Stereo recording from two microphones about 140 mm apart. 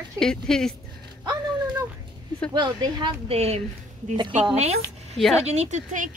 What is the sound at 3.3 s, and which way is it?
Speech, 50° right (ahead or behind).